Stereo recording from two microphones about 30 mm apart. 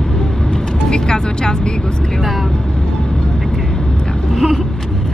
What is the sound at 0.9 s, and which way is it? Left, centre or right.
Vehicle, left.